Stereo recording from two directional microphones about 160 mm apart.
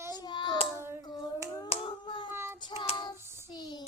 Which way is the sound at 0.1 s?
25° left (ahead or behind).